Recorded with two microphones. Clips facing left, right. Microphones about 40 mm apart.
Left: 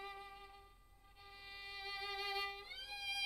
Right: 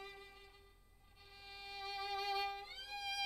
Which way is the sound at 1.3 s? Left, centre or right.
Centre.